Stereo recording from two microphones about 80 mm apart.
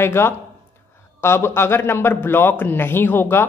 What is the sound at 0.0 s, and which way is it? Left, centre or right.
A man's voice, left.